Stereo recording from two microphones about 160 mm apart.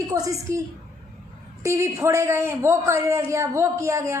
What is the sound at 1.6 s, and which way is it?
A man's voice, 20° right (ahead or behind).